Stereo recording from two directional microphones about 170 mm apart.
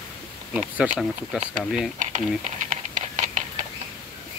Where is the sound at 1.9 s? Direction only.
45° right (ahead or behind).